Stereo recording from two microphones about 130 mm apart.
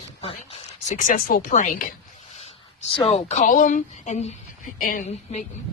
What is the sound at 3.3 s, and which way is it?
A woman's voice, 85° left.